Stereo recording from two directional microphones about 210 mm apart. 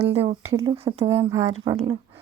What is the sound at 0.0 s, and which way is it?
Speech, 30° right (ahead or behind).